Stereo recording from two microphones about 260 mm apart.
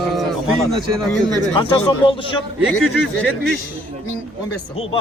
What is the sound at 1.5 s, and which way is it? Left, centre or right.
Speech, centre.